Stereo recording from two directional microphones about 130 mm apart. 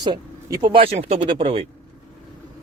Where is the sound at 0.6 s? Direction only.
45° right (ahead or behind).